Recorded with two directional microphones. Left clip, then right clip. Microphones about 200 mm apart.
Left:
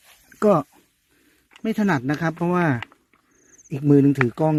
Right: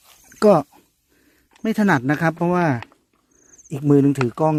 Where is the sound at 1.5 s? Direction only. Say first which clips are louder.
Right 4 dB; 15° right (ahead or behind).